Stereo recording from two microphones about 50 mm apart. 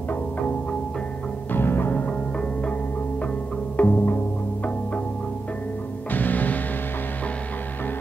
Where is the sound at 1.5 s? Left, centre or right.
Left.